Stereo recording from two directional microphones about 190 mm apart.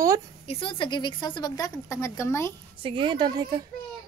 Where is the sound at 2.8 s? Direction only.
25° right (ahead or behind).